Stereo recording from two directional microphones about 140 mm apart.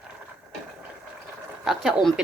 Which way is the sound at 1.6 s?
Centre (ahead or behind).